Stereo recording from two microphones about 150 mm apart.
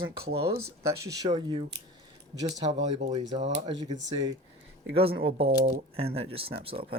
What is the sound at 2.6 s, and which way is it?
Speech, 45° right (ahead or behind).